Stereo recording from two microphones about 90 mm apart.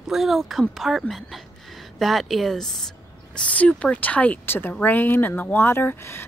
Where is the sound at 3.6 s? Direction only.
10° left (ahead or behind).